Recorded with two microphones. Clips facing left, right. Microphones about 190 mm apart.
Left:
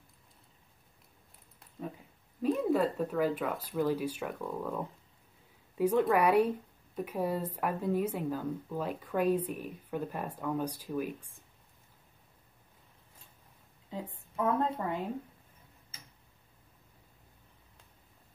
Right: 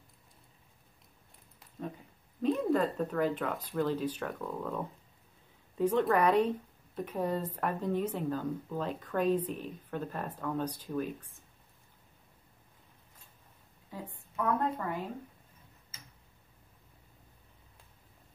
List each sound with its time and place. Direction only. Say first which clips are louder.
2.4 s speech: even; 5° left (ahead or behind)
14.3 s a woman's voice: left 1 dB; 20° left (ahead or behind)